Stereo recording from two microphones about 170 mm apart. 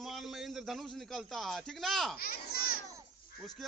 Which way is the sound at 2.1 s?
60° left (ahead or behind).